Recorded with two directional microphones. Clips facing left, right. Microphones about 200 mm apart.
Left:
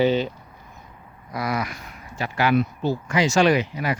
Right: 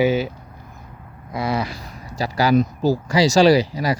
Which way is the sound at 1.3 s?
25° right (ahead or behind).